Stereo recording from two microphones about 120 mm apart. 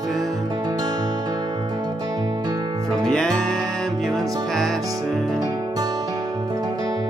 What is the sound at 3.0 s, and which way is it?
Music, 5° left (ahead or behind).